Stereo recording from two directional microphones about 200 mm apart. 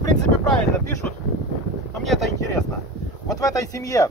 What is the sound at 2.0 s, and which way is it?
Speech, centre (ahead or behind).